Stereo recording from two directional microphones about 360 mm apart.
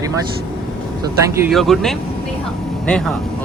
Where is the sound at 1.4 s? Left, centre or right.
Centre.